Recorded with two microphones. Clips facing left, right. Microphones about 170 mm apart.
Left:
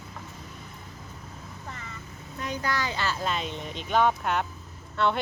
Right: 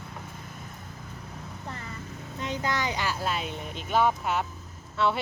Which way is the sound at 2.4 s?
20° right (ahead or behind).